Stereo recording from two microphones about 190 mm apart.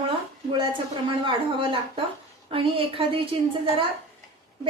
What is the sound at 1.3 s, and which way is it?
A woman's voice, 25° right (ahead or behind).